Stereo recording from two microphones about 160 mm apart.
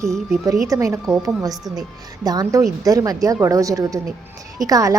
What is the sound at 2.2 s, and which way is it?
A woman's voice, 25° right (ahead or behind).